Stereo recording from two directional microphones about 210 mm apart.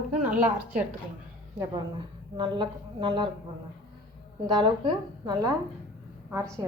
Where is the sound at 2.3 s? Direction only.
20° right (ahead or behind).